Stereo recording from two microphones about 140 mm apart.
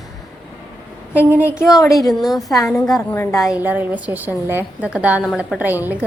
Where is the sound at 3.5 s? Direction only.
10° right (ahead or behind).